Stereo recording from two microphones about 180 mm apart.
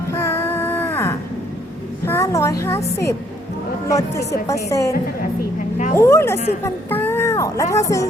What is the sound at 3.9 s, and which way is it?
Speech, 20° left (ahead or behind).